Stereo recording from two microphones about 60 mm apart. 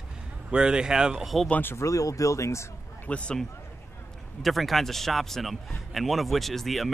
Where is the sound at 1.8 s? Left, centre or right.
Left.